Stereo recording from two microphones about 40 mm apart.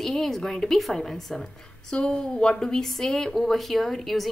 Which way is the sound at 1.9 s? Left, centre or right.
Left.